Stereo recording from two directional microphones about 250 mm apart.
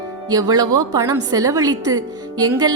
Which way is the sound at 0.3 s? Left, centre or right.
Centre.